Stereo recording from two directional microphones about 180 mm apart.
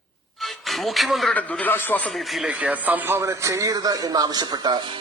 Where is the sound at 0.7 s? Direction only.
Centre (ahead or behind).